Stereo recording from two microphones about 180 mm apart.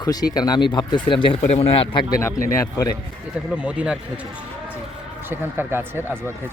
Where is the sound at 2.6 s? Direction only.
20° left (ahead or behind).